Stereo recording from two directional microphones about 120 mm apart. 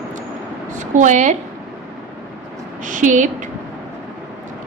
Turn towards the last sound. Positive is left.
turn(degrees=-90)